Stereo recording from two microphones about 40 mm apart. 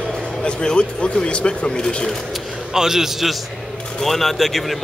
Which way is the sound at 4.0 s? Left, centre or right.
Centre.